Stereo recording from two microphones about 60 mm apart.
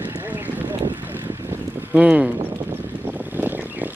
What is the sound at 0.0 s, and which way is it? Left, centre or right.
Vehicle, right.